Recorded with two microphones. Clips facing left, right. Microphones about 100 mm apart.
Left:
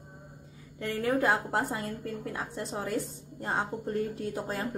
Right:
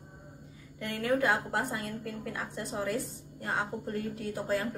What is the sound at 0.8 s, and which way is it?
A woman's voice, 30° left (ahead or behind).